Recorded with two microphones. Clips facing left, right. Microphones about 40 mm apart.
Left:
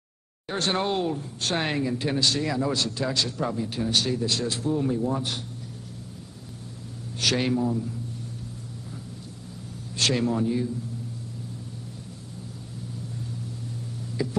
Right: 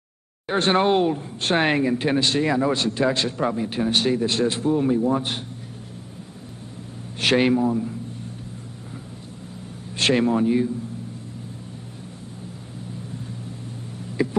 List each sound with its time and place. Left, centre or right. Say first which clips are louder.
0.5 s speech: right 7 dB; right
7.2 s speech: right 6 dB; right
9.9 s speech: right 5 dB; right
14.2 s speech: right 6 dB; right